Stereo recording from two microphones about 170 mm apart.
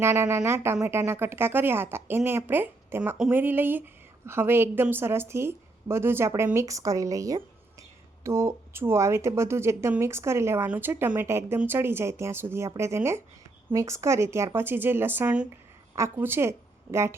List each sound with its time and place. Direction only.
0.0 s a woman's voice: 15° right (ahead or behind)